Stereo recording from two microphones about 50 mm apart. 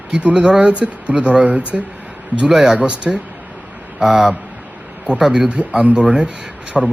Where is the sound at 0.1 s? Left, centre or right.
Right.